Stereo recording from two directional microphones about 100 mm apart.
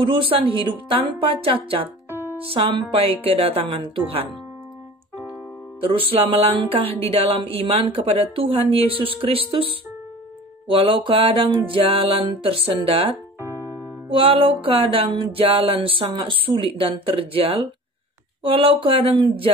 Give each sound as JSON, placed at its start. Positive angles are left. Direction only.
{"t": 0.0, "sound": "music", "side_deg": -60}
{"t": 2.0, "sound": "music", "side_deg": -25}
{"t": 2.4, "sound": "a woman's voice", "side_deg": -70}
{"t": 5.8, "sound": "a woman's voice", "side_deg": -65}
{"t": 10.7, "sound": "music", "side_deg": -60}
{"t": 13.4, "sound": "music", "side_deg": -25}
{"t": 14.0, "sound": "music", "side_deg": -65}